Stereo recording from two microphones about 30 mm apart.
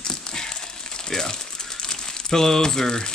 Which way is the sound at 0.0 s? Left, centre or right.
Left.